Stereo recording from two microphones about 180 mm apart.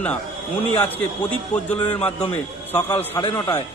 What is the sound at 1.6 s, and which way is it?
Speech, 10° left (ahead or behind).